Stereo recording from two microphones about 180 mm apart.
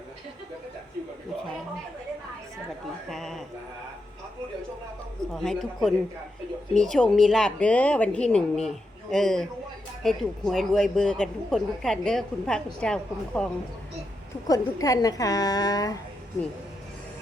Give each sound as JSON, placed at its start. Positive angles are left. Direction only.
{"t": 3.1, "sound": "speech", "side_deg": 0}
{"t": 5.3, "sound": "speech", "side_deg": 0}
{"t": 14.4, "sound": "a woman's voice", "side_deg": 20}